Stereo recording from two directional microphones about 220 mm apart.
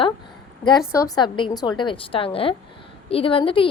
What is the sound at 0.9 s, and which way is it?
A woman's voice, 15° left (ahead or behind).